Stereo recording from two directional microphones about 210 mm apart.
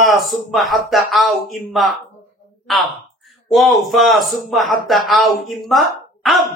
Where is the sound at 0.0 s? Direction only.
Centre (ahead or behind).